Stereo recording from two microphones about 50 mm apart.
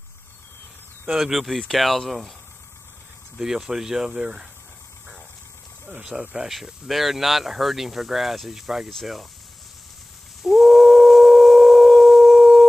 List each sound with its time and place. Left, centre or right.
1.1 s speech: centre
3.3 s speech: centre
5.9 s speech: centre
6.3 s speech: centre
10.4 s a sound: centre